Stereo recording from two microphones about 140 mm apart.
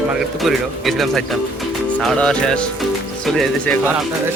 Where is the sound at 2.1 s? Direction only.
5° left (ahead or behind).